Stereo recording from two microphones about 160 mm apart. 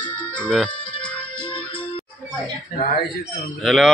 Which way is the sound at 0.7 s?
30° left (ahead or behind).